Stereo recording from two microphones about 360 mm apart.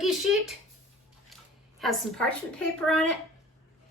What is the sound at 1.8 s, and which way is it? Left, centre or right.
A woman's voice, centre.